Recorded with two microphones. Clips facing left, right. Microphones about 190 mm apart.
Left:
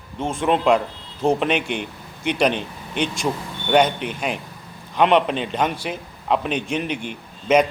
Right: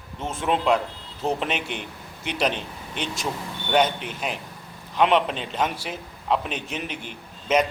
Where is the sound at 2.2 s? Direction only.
60° left (ahead or behind).